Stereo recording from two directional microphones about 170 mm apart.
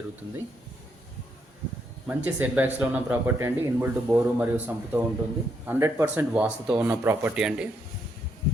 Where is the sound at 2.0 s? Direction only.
10° right (ahead or behind).